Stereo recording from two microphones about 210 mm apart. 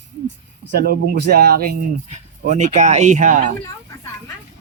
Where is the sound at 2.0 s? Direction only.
35° right (ahead or behind).